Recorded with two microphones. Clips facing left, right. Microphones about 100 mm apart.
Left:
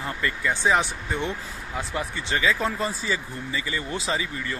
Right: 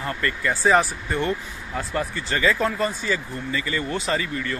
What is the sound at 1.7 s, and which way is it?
Speech, 10° left (ahead or behind).